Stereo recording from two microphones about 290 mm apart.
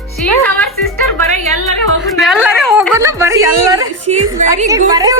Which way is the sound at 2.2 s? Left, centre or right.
Centre.